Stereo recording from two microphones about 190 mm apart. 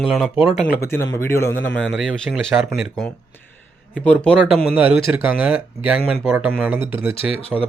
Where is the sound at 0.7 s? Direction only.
15° left (ahead or behind).